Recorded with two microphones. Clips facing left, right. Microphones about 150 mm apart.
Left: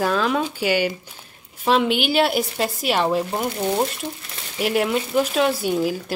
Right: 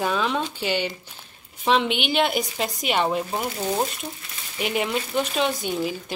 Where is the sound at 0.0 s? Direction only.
Centre (ahead or behind).